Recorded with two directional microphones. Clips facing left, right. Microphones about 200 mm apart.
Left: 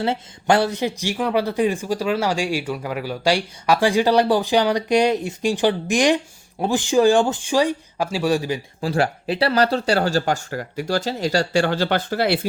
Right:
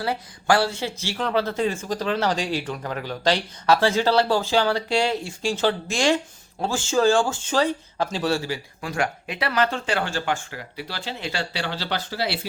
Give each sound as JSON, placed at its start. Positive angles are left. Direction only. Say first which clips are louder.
{"t": 0.0, "sound": "speech", "louder": "left 4 dB", "side_deg": 25}
{"t": 8.8, "sound": "speech", "louder": "left 6 dB", "side_deg": 35}